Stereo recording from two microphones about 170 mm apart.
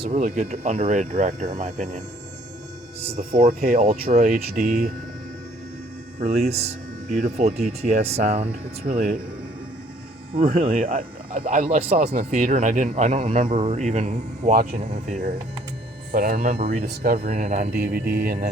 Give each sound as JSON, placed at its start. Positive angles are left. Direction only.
{"t": 0.0, "sound": "speech", "side_deg": -45}
{"t": 3.0, "sound": "speech", "side_deg": -35}
{"t": 3.3, "sound": "speech", "side_deg": -55}
{"t": 3.8, "sound": "speech", "side_deg": -40}
{"t": 6.1, "sound": "speech", "side_deg": -45}
{"t": 10.4, "sound": "speech", "side_deg": -45}
{"t": 14.5, "sound": "speech", "side_deg": -60}
{"t": 14.8, "sound": "speech", "side_deg": -40}
{"t": 16.1, "sound": "speech", "side_deg": -55}
{"t": 17.7, "sound": "speech", "side_deg": -65}